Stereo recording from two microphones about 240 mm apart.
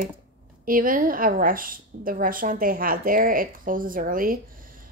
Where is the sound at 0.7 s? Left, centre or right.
Right.